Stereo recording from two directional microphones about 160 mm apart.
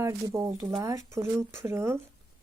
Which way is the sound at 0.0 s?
20° right (ahead or behind).